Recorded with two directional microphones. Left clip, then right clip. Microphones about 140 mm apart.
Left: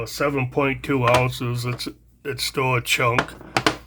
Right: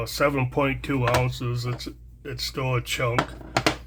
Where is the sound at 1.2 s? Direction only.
40° left (ahead or behind).